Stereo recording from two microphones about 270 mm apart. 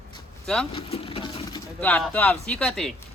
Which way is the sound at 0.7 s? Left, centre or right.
Left.